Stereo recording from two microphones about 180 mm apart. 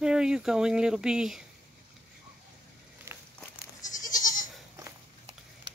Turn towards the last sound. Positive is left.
turn(degrees=45)  # may be behind; listen again after turning